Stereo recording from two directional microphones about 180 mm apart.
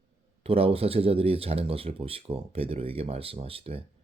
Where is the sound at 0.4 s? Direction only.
30° right (ahead or behind).